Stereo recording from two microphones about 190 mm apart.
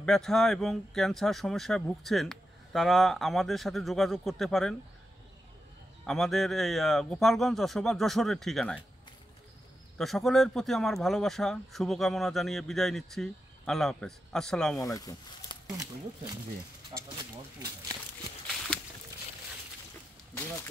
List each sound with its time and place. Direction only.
0.0 s speech: centre (ahead or behind)
6.0 s speech: centre (ahead or behind)
9.9 s speech: centre (ahead or behind)
15.0 s speech: 20° left (ahead or behind)
15.7 s speech: 15° right (ahead or behind)
16.9 s a sound: 20° right (ahead or behind)